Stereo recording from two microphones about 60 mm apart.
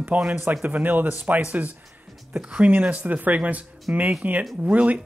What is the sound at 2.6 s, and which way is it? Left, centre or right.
Speech, right.